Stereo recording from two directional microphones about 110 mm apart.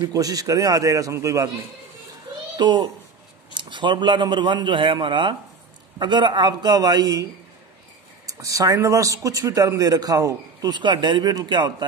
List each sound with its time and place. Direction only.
0.0 s a man's voice: 35° right (ahead or behind)
2.5 s a child's voice: 40° right (ahead or behind)
8.3 s a man's voice: 30° right (ahead or behind)